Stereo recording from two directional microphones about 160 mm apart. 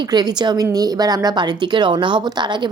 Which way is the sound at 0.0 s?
25° right (ahead or behind).